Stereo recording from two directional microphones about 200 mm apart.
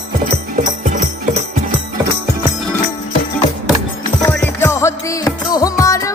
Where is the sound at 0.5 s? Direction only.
40° right (ahead or behind).